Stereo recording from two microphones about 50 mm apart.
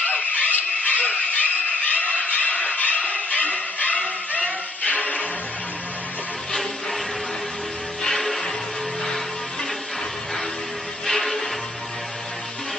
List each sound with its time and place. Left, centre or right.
0.0 s a sound: left
8.0 s music: centre
11.1 s music: centre